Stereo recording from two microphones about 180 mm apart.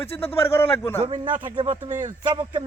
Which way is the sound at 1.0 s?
25° right (ahead or behind).